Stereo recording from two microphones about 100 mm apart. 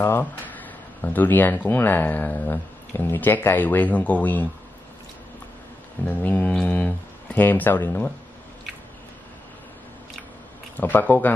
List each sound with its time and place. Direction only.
0.0 s speech: 20° left (ahead or behind)
6.0 s speech: 15° left (ahead or behind)
10.8 s speech: 20° left (ahead or behind)